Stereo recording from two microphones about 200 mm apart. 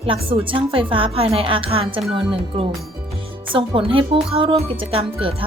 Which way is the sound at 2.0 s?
Centre (ahead or behind).